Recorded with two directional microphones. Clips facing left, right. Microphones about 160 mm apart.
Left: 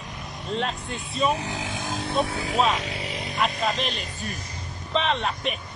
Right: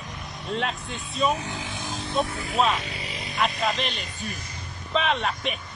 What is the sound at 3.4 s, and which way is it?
Speech, centre (ahead or behind).